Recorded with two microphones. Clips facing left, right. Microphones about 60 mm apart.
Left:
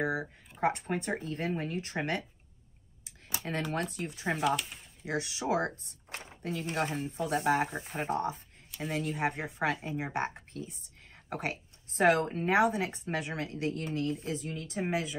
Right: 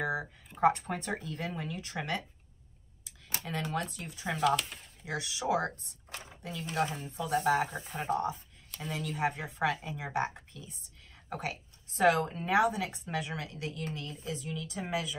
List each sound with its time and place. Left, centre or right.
0.6 s speech: left
3.4 s speech: left
4.4 s speech: centre
5.0 s a woman's voice: left